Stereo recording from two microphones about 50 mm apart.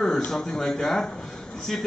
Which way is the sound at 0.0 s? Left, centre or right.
Centre.